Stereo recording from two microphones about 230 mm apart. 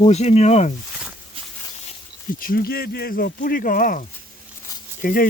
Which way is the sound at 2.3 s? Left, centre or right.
Left.